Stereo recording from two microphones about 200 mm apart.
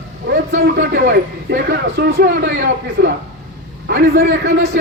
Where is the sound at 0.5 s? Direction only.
50° right (ahead or behind).